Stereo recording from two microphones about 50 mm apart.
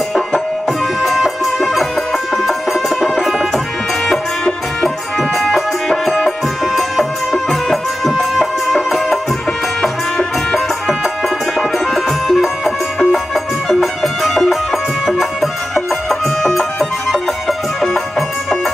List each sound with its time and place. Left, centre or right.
0.7 s music: centre
4.8 s music: centre